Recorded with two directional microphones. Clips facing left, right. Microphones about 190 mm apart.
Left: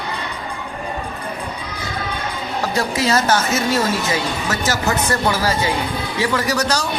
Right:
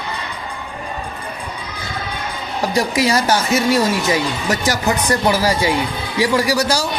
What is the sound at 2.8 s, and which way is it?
Speech, 15° right (ahead or behind).